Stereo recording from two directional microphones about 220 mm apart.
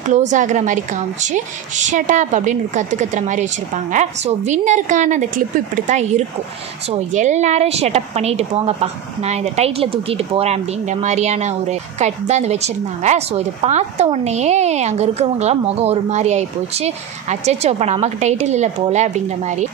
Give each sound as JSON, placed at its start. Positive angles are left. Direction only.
{"t": 0.3, "sound": "a woman's voice", "side_deg": -35}